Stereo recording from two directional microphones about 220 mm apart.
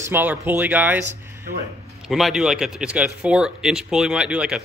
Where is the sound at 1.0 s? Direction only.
40° right (ahead or behind).